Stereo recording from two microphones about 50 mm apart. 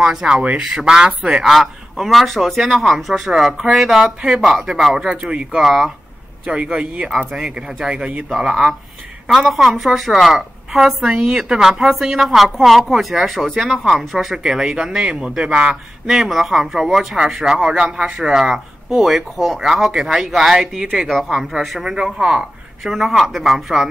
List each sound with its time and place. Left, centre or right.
0.0 s speech: centre
1.4 s speech: centre
5.1 s speech: centre
6.4 s speech: centre
7.1 s speech: centre
9.5 s speech: centre; by 15.8 s right
16.1 s speech: centre
17.6 s speech: centre